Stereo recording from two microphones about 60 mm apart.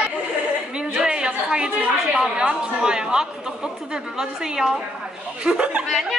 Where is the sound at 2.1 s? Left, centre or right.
Centre.